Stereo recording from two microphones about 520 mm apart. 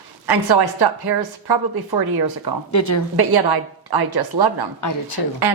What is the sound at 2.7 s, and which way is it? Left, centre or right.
Speech, left.